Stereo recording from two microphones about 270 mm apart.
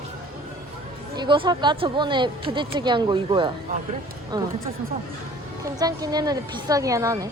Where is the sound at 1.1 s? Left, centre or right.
Centre.